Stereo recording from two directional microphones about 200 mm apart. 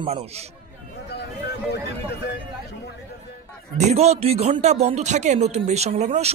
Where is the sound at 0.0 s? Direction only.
30° right (ahead or behind).